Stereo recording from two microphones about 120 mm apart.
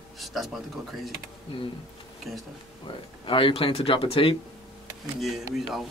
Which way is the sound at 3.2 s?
45° left (ahead or behind).